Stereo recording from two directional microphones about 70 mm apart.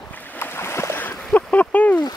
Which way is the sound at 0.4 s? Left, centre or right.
Left.